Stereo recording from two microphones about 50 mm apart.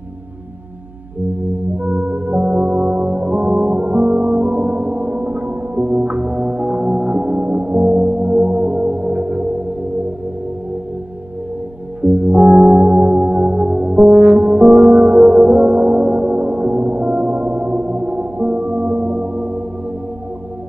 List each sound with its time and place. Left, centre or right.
1.8 s music: right
12.0 s music: right